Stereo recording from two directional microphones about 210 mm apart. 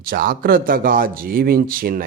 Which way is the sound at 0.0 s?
45° right (ahead or behind).